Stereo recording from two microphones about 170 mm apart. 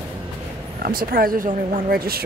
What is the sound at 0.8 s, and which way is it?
Speech, 60° right (ahead or behind).